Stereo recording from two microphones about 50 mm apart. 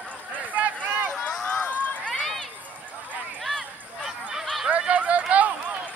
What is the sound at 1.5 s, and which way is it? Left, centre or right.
Run, left.